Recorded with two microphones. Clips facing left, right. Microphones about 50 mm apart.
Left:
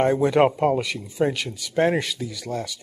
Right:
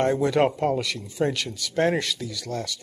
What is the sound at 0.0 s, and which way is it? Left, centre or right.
Speech, centre.